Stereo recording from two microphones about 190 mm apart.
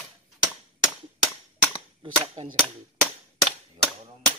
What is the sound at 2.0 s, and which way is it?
Cap gun, 35° right (ahead or behind).